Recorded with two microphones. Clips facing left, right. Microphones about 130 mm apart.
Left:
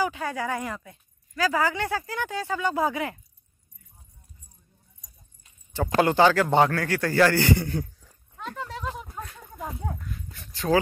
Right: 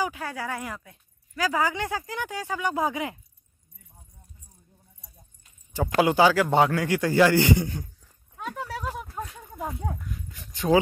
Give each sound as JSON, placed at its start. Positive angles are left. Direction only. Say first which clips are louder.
{"t": 0.1, "sound": "speech", "louder": "left 3 dB", "side_deg": -5}
{"t": 1.3, "sound": "speech", "louder": "left 1 dB", "side_deg": -15}
{"t": 5.9, "sound": "speech", "louder": "even", "side_deg": -10}
{"t": 6.7, "sound": "speech", "louder": "right 2 dB", "side_deg": -15}
{"t": 8.4, "sound": "a sound", "louder": "right 1 dB", "side_deg": -10}
{"t": 9.1, "sound": "horse", "louder": "right 3 dB", "side_deg": -10}
{"t": 10.3, "sound": "a sound", "louder": "right 2 dB", "side_deg": -15}